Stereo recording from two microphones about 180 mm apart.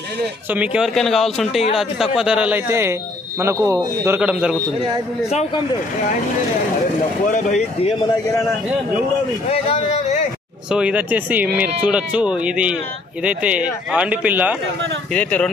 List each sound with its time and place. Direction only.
0.5 s a man's voice: 5° right (ahead or behind)
7.2 s speech: 45° left (ahead or behind)
8.0 s a man's voice: 20° left (ahead or behind)
9.5 s speech: 35° left (ahead or behind)
10.7 s a man's voice: 5° right (ahead or behind)
15.1 s a man's voice: 5° left (ahead or behind)